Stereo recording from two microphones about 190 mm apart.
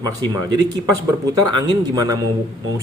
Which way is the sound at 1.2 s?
20° right (ahead or behind).